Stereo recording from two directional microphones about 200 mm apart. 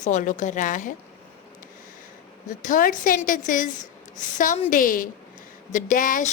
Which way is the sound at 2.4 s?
40° left (ahead or behind).